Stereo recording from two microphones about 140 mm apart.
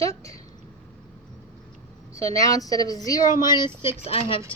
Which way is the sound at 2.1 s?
25° left (ahead or behind).